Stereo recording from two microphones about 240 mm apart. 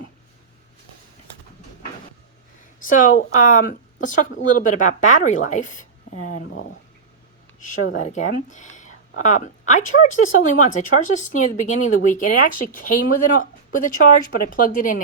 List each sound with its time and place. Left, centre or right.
2.8 s speech: left
6.3 s speech: left
7.9 s speech: left